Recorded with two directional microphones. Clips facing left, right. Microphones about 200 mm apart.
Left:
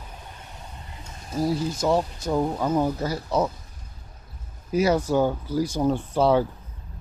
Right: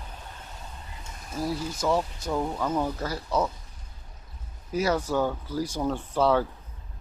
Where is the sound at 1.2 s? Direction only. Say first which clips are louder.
Left 6 dB; 30° left (ahead or behind).